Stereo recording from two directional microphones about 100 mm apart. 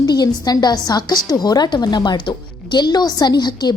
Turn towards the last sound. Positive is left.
turn(degrees=45)  # may be behind; listen again after turning